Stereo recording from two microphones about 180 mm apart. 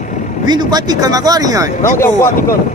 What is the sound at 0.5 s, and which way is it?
A man's voice, 20° right (ahead or behind).